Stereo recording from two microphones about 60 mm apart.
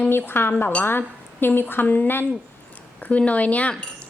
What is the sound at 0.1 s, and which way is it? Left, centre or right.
Speech, left.